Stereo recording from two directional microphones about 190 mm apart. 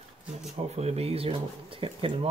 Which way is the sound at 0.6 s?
35° right (ahead or behind).